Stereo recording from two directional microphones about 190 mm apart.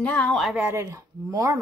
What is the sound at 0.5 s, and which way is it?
Speech, 15° right (ahead or behind).